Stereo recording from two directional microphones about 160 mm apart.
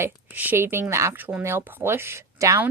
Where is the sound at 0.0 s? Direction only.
10° right (ahead or behind).